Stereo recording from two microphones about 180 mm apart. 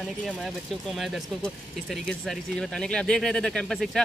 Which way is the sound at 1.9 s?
5° left (ahead or behind).